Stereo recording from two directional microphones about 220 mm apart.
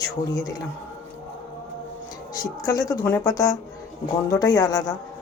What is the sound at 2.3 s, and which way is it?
Speech, 15° left (ahead or behind).